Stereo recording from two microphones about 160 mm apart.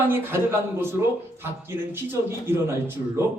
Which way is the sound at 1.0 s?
20° right (ahead or behind).